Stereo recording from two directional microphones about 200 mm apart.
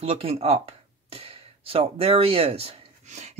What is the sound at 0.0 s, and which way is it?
Speech, 30° right (ahead or behind).